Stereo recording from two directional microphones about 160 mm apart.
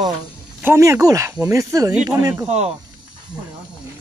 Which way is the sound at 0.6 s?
15° right (ahead or behind).